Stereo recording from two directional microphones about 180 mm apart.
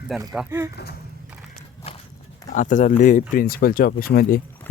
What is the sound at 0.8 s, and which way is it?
Speech, 65° left (ahead or behind).